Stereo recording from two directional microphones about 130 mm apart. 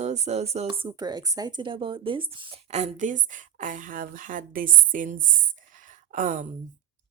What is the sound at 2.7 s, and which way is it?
A woman's voice, 60° right (ahead or behind).